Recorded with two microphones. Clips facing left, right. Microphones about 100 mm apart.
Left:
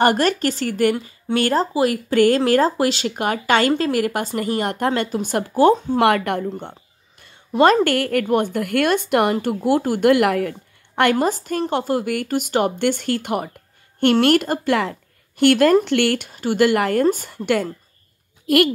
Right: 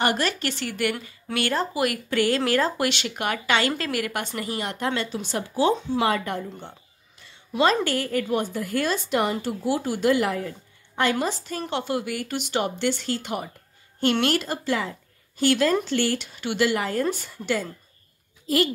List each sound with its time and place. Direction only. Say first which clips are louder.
0.0 s speech: left 7 dB; 45° left (ahead or behind)
2.1 s speech: left 7 dB; 45° left (ahead or behind)
5.9 s speech: left 7 dB; 70° left (ahead or behind)
7.2 s a woman's voice: left 7 dB; 50° left (ahead or behind); by 10.5 s 70° left (ahead or behind)
11.1 s a woman's voice: left 7 dB; 45° left (ahead or behind)
17.0 s a woman's voice: left 8 dB; 45° left (ahead or behind); by 18.6 s 65° left (ahead or behind)